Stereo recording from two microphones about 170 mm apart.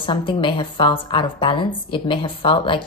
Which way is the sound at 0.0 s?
30° left (ahead or behind).